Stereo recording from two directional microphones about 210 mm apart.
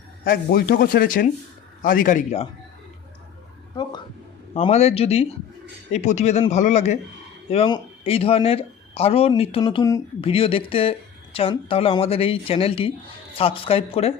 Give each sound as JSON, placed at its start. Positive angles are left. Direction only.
{"t": 0.3, "sound": "speech", "side_deg": 45}
{"t": 4.5, "sound": "speech", "side_deg": 30}